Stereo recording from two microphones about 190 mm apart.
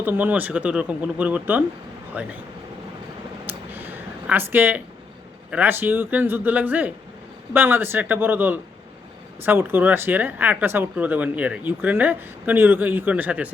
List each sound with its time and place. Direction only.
0.0 s speech: 10° right (ahead or behind)
3.4 s a sound: 10° right (ahead or behind)
5.5 s speech: 10° right (ahead or behind)